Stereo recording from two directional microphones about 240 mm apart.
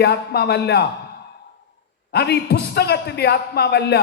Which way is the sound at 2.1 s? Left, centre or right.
Left.